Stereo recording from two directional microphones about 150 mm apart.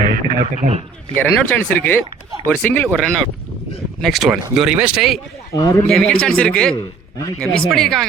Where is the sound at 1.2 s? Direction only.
10° left (ahead or behind).